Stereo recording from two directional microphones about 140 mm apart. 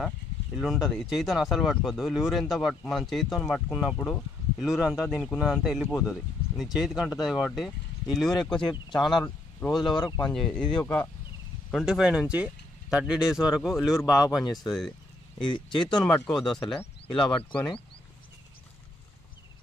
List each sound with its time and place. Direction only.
0.6 s speech: centre (ahead or behind)
9.9 s speech: 25° left (ahead or behind)
10.3 s speech: 10° left (ahead or behind)
11.7 s speech: 5° right (ahead or behind)
14.7 s vehicle: 5° left (ahead or behind)
16.0 s speech: 5° left (ahead or behind)